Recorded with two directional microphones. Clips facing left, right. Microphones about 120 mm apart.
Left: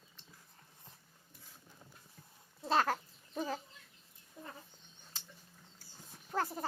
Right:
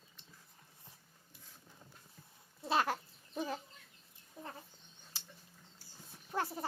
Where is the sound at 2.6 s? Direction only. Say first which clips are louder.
Left 2 dB; 10° right (ahead or behind).